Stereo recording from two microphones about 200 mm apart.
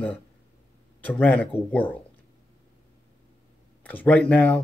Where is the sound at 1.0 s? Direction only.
5° left (ahead or behind).